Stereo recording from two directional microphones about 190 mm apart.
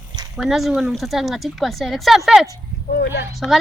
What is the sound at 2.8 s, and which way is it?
Speech, 55° left (ahead or behind).